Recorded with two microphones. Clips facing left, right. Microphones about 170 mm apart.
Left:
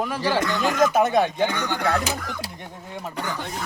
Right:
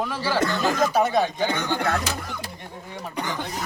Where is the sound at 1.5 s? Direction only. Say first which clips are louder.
Right 1 dB; 20° right (ahead or behind).